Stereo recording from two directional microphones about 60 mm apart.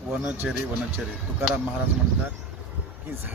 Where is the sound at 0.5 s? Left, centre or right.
Right.